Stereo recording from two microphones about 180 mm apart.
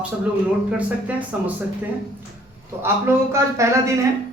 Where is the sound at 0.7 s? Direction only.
10° right (ahead or behind).